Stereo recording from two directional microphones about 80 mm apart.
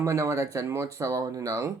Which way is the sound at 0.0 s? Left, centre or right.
Right.